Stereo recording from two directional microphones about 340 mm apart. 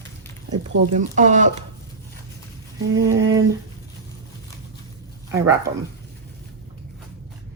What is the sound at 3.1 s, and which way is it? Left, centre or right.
Speech, centre.